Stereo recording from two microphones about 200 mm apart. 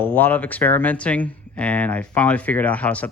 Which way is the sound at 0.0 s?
10° left (ahead or behind).